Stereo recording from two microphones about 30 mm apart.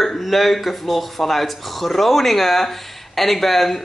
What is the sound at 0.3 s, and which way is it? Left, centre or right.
Speech, centre.